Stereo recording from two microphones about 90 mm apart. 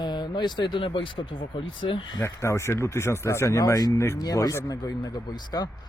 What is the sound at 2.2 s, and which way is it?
Speech, 30° left (ahead or behind).